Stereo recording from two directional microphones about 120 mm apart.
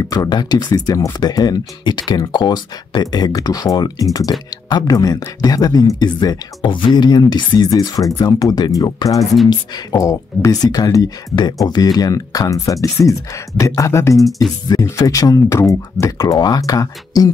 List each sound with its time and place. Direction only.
0.1 s speech: 35° left (ahead or behind)
9.2 s speech: centre (ahead or behind)
9.5 s speech: 25° left (ahead or behind)